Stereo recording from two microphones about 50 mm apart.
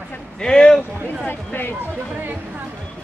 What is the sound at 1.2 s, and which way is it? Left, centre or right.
Speech, left.